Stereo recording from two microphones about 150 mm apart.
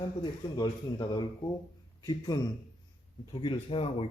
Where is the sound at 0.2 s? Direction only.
25° left (ahead or behind).